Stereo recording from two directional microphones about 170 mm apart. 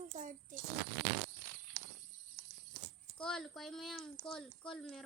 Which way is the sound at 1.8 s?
35° right (ahead or behind).